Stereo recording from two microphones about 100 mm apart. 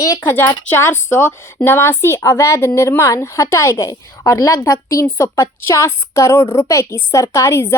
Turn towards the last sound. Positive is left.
turn(degrees=25)  # may be behind; listen again after turning